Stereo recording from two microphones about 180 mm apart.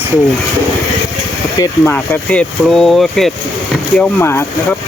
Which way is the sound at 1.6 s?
10° left (ahead or behind).